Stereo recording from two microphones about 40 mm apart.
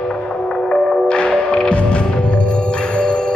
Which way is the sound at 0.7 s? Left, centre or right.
Left.